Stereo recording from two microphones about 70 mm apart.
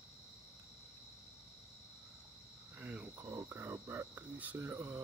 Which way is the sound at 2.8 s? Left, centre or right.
Right.